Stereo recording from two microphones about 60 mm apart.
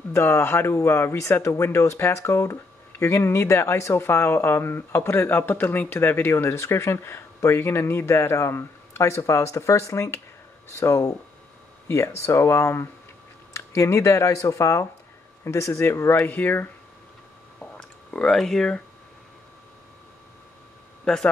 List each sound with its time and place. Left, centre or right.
0.1 s speech: left
11.9 s speech: left
16.3 s speech: left
17.6 s a sound: centre
21.0 s speech: centre